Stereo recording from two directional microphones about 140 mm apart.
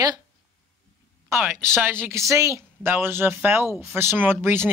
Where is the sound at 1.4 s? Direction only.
15° right (ahead or behind).